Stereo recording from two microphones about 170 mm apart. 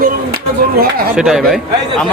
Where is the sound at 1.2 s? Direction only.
Centre (ahead or behind).